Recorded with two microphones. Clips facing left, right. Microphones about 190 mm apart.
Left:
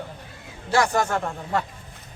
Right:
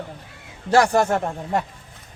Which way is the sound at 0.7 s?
35° right (ahead or behind).